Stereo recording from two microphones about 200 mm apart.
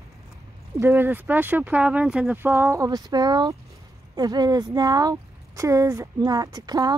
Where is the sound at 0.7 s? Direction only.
10° right (ahead or behind).